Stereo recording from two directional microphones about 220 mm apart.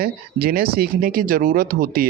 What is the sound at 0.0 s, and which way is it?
Speech, 45° right (ahead or behind).